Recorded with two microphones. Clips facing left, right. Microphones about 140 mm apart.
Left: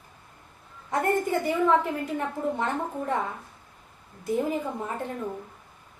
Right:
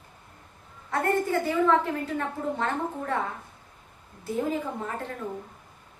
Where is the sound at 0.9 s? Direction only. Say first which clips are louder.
Left 1 dB; 15° left (ahead or behind).